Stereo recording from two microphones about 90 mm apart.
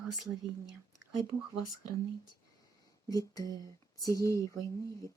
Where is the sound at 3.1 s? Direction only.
40° left (ahead or behind).